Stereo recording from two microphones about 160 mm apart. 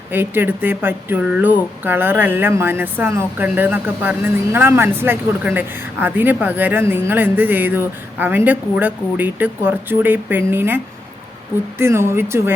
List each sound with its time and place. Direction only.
0.1 s speech: 15° right (ahead or behind)
11.8 s speech: 15° right (ahead or behind)